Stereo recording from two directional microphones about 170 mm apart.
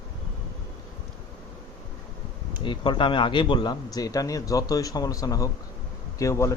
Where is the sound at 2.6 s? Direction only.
25° left (ahead or behind).